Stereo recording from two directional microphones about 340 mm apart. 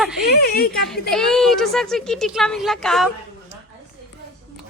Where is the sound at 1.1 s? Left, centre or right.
Centre.